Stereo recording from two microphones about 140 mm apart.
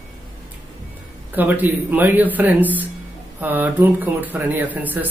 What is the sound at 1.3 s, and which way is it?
A man's voice, 10° right (ahead or behind).